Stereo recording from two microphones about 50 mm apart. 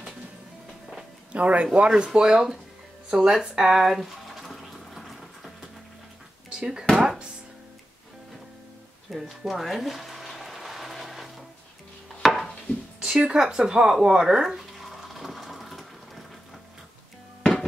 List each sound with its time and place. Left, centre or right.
1.3 s speech: right
3.1 s a sound: centre
6.5 s speech: centre
7.0 s chopping: centre
9.1 s speech: centre
9.5 s a sound: centre
12.2 s wood: centre
13.0 s speech: centre
14.8 s a sound: centre